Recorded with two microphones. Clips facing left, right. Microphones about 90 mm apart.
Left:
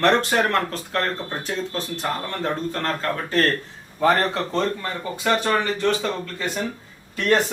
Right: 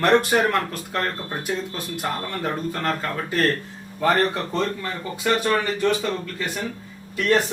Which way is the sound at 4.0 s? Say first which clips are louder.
Left 1 dB; 15° left (ahead or behind).